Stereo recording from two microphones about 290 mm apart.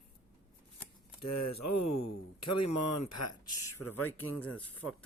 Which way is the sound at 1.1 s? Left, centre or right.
Left.